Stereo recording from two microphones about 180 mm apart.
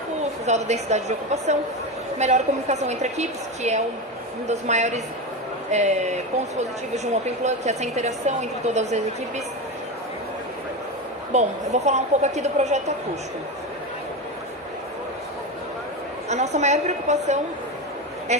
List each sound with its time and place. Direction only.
0.4 s a woman's voice: 40° right (ahead or behind)
11.3 s a woman's voice: 40° right (ahead or behind)
16.3 s a woman's voice: 40° right (ahead or behind)